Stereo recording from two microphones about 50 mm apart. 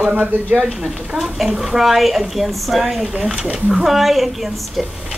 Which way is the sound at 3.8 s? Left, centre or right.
Centre.